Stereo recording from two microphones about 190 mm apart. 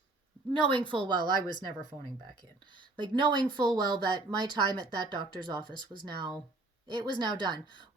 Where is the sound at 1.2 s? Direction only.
20° left (ahead or behind).